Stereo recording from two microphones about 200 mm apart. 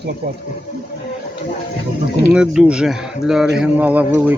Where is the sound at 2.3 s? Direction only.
5° right (ahead or behind).